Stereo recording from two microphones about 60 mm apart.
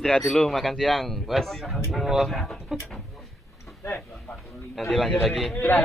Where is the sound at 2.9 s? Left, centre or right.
Centre.